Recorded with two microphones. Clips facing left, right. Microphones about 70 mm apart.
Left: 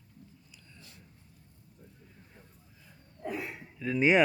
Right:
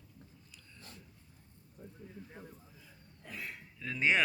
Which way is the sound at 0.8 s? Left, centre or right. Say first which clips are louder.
Right 3 dB; right.